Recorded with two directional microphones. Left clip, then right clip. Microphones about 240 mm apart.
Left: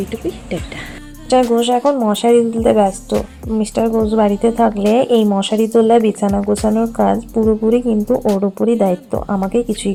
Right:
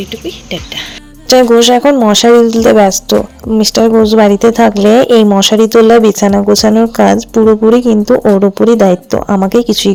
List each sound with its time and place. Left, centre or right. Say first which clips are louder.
0.1 s speech: right 3 dB; centre
1.3 s speech: right 8 dB; right